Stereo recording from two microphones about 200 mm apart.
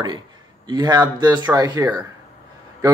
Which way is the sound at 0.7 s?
20° right (ahead or behind).